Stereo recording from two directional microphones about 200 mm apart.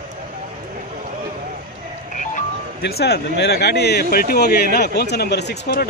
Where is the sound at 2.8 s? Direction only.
55° left (ahead or behind).